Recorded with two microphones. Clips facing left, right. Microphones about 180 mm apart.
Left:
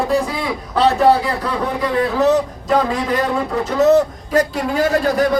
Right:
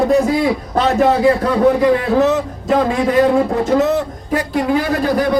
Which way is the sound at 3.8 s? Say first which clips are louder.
Left 4 dB; 40° left (ahead or behind).